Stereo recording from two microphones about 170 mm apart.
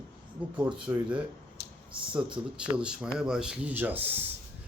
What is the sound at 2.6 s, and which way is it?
Speech, 5° right (ahead or behind).